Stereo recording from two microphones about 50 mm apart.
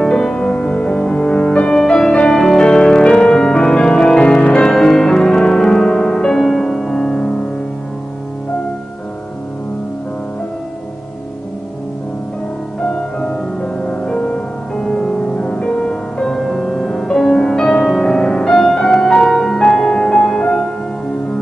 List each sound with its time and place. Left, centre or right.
0.0 s music: centre
12.8 s music: left